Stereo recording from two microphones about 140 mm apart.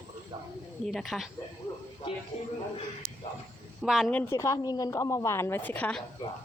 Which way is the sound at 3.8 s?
Centre (ahead or behind).